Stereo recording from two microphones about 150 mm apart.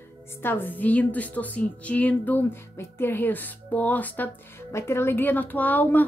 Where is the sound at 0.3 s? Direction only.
15° left (ahead or behind).